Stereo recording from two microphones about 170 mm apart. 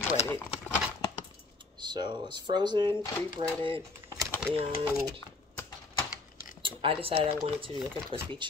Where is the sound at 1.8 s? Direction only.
25° right (ahead or behind).